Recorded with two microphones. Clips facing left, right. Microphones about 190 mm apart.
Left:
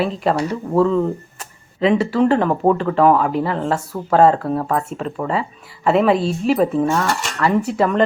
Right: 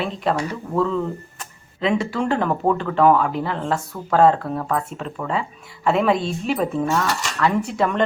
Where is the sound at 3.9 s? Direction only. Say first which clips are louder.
Left 6 dB; 20° left (ahead or behind).